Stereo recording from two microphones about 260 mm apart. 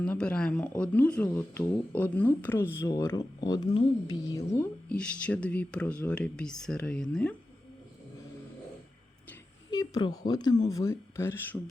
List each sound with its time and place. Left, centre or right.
0.0 s speech: centre
9.6 s speech: centre